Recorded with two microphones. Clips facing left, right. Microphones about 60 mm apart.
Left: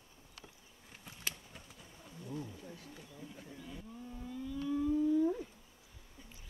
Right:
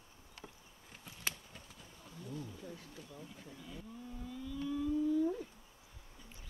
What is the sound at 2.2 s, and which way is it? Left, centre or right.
Wild animals, left.